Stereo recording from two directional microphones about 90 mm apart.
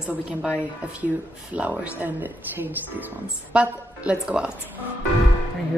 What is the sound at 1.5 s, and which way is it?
A woman's voice, 15° right (ahead or behind).